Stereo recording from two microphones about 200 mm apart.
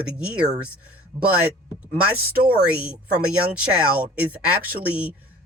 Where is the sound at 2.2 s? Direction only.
50° right (ahead or behind).